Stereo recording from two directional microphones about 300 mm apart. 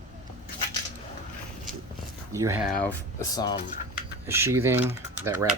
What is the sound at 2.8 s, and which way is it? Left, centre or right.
Speech, centre.